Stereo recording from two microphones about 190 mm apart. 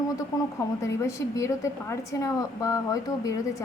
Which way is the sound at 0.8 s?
15° left (ahead or behind).